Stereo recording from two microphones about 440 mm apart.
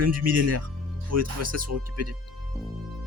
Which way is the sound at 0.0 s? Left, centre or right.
Right.